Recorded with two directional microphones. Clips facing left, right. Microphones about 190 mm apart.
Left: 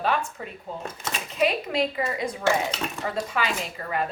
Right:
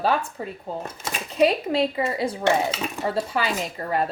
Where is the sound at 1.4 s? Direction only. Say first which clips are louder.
Right 4 dB; 30° right (ahead or behind).